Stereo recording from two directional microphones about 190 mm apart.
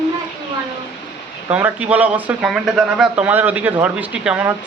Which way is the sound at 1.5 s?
10° right (ahead or behind).